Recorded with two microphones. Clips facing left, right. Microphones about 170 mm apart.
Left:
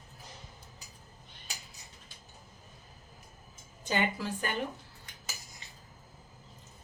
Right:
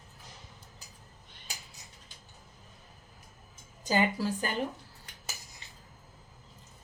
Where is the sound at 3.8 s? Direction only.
35° right (ahead or behind).